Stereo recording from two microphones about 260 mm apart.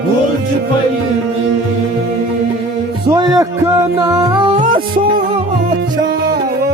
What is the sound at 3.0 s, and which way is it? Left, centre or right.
Music, centre.